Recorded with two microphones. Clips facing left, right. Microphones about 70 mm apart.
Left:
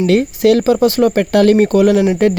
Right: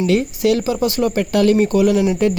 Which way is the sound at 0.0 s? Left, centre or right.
Left.